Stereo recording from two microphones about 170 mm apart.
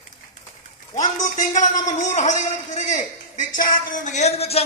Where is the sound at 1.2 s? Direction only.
50° left (ahead or behind).